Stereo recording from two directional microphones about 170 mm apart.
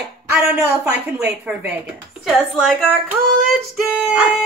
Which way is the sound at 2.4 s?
5° left (ahead or behind).